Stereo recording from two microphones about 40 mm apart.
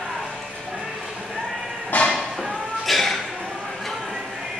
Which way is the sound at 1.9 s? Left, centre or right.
Left.